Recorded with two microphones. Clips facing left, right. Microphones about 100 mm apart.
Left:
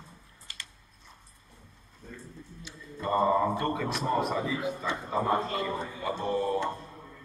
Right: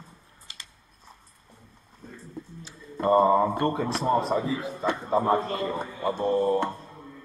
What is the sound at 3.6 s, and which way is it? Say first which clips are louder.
A man's voice: right 4 dB; 30° right (ahead or behind).